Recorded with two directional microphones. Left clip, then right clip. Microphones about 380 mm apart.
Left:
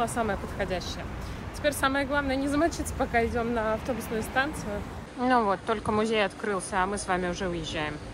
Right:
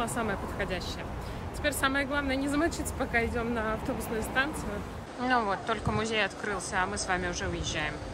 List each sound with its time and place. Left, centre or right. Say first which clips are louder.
0.0 s speech: left 3 dB; centre